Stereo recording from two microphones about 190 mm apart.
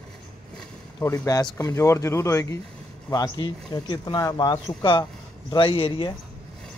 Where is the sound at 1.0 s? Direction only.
15° left (ahead or behind).